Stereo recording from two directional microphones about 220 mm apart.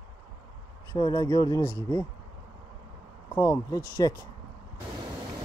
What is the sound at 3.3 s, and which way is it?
Speech, 15° left (ahead or behind).